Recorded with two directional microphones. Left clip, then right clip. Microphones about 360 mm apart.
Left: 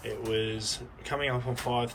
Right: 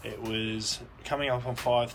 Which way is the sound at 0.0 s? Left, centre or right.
Centre.